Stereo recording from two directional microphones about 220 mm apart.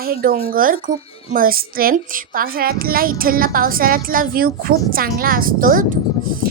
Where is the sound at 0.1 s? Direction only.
40° right (ahead or behind).